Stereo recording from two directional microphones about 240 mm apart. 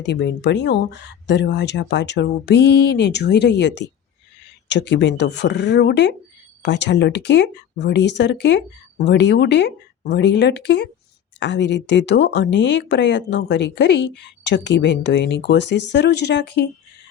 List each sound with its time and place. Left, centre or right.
0.0 s speech: left